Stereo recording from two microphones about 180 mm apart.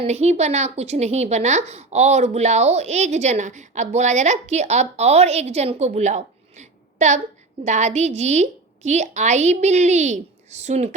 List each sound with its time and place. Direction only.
0.0 s a woman's voice: 35° right (ahead or behind)